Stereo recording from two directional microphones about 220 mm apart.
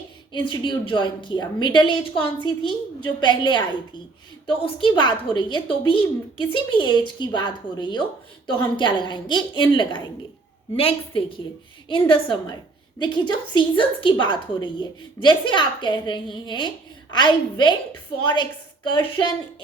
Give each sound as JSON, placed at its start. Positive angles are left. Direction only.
{"t": 0.3, "sound": "a woman's voice", "side_deg": 20}